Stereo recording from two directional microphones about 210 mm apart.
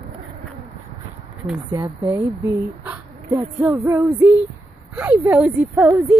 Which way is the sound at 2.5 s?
15° right (ahead or behind).